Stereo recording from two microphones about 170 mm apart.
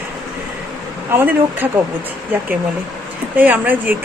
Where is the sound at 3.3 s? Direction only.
10° right (ahead or behind).